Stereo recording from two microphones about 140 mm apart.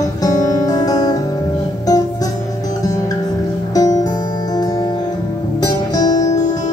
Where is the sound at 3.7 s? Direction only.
25° left (ahead or behind).